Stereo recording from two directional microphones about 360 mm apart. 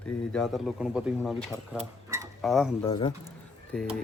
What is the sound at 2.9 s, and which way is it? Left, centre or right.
A man's voice, centre.